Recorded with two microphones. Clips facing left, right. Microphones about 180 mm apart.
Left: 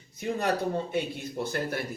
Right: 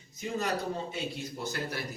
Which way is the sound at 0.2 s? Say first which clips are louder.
Left 4 dB; 55° left (ahead or behind).